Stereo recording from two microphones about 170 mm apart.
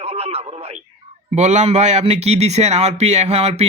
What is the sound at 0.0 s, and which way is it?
A man's voice, 35° right (ahead or behind).